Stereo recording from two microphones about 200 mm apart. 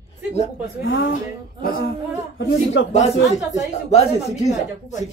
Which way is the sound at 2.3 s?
65° left (ahead or behind).